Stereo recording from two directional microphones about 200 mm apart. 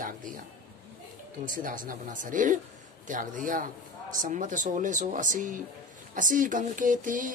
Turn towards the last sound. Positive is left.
turn(degrees=-40)  # may be behind; listen again after turning